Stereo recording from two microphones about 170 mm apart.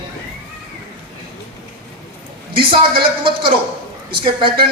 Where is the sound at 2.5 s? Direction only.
30° right (ahead or behind).